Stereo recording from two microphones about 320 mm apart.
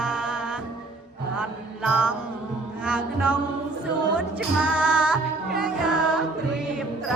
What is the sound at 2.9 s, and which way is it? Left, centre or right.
Music, centre.